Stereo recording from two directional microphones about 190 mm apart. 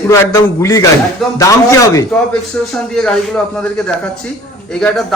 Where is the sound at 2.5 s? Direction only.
5° left (ahead or behind).